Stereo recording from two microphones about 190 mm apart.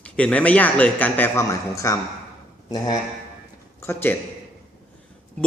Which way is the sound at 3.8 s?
10° left (ahead or behind).